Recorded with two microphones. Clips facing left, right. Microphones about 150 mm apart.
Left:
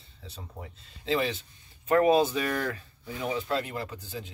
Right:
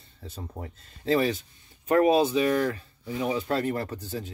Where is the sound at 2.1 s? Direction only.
25° right (ahead or behind); by 4.3 s 45° right (ahead or behind).